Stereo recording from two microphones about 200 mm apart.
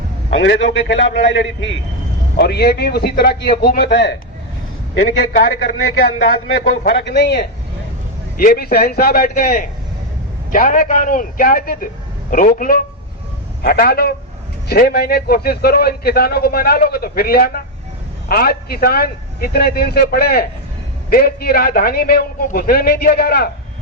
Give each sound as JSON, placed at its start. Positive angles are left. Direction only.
{"t": 0.3, "sound": "a man's voice", "side_deg": 65}
{"t": 2.3, "sound": "a man's voice", "side_deg": 55}
{"t": 6.8, "sound": "a man's voice", "side_deg": 55}